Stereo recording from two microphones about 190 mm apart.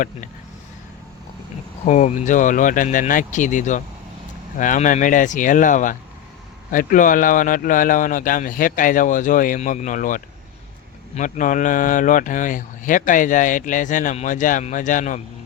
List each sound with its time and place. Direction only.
1.8 s speech: 35° left (ahead or behind)